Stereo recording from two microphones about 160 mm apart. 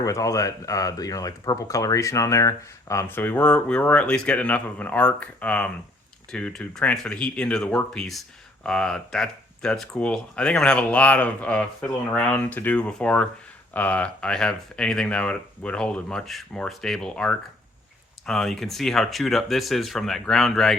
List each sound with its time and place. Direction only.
0.0 s speech: 20° left (ahead or behind); by 20.7 s centre (ahead or behind)